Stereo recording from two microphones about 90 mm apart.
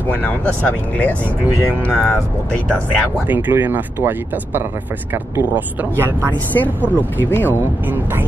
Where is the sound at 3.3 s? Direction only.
20° right (ahead or behind).